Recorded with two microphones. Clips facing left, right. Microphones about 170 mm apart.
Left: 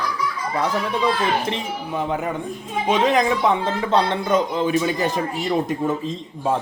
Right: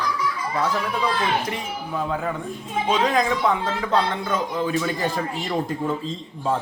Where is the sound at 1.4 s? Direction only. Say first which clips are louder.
Left 3 dB; 25° left (ahead or behind).